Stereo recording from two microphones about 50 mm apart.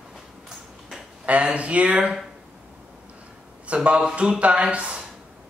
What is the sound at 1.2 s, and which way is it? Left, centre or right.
Speech, right.